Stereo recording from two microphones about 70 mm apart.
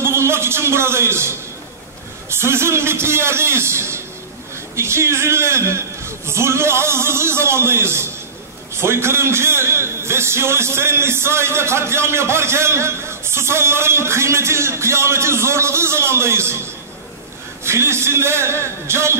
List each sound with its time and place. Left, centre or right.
0.0 s a sound: right
2.2 s a man's voice: right
17.6 s a man's voice: right